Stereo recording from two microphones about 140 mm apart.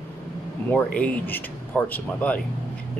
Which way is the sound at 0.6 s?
10° left (ahead or behind).